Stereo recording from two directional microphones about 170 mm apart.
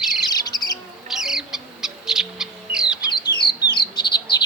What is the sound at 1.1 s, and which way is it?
Owl, 5° right (ahead or behind).